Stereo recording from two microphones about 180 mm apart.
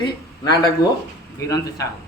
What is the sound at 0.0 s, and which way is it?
A man's voice, 25° left (ahead or behind).